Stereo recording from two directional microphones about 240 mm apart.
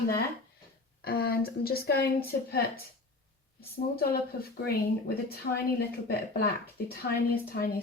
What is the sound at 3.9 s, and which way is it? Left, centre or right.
Speech, left.